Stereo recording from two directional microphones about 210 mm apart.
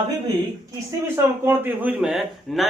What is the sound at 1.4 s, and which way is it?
Speech, 10° right (ahead or behind).